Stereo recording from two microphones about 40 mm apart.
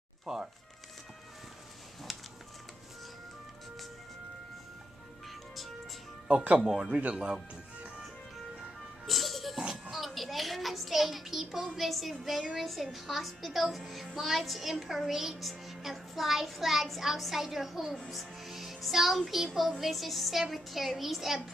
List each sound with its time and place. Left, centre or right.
0.2 s speech: centre
2.1 s a sound: centre
6.2 s speech: right
9.0 s music: centre
9.6 s music: centre
9.9 s music: centre
11.7 s a child's voice: centre